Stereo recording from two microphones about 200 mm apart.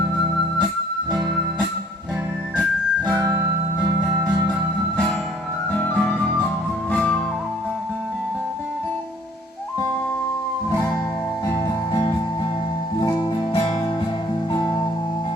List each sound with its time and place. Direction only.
3.1 s music: 20° right (ahead or behind)
5.7 s music: 5° left (ahead or behind)
10.7 s music: 15° left (ahead or behind)
13.0 s music: 20° left (ahead or behind)